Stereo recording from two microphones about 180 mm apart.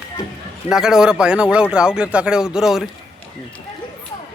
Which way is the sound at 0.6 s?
5° right (ahead or behind).